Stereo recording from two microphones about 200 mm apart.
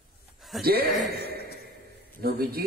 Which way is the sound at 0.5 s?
Centre (ahead or behind).